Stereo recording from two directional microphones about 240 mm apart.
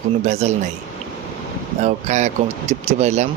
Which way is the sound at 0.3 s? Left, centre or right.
Right.